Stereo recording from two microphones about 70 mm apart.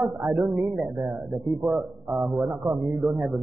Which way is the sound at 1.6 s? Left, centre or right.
Centre.